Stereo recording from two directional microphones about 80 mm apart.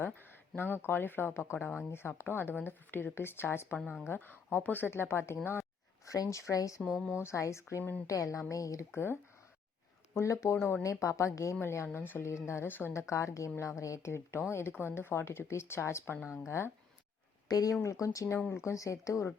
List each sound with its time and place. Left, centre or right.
0.0 s speech: left
10.2 s speech: left
17.5 s speech: left